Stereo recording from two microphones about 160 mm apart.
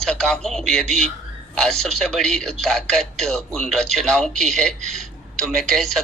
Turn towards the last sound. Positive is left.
turn(degrees=0)  # may be behind; listen again after turning